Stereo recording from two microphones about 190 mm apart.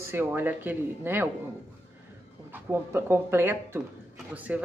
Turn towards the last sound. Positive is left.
turn(degrees=-10)  # may be behind; listen again after turning